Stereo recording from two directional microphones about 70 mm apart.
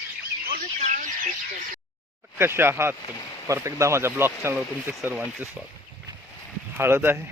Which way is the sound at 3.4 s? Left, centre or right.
Right.